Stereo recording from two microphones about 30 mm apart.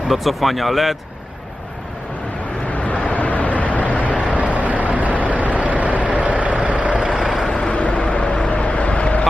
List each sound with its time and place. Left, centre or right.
0.1 s speech: centre
2.7 s vehicle: left
4.4 s vehicle: right
7.7 s vehicle: left